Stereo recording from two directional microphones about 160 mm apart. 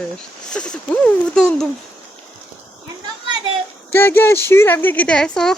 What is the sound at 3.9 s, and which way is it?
Speech, 15° left (ahead or behind).